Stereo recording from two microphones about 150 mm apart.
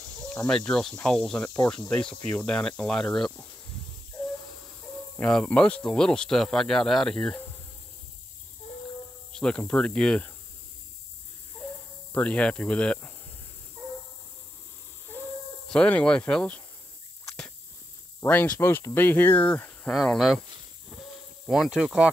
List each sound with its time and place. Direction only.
0.3 s speech: 5° left (ahead or behind)
5.2 s speech: 10° left (ahead or behind)
9.3 s speech: 5° left (ahead or behind)
12.1 s speech: 10° left (ahead or behind)
15.7 s speech: 5° left (ahead or behind)
18.2 s speech: 15° left (ahead or behind)
21.5 s speech: 5° right (ahead or behind)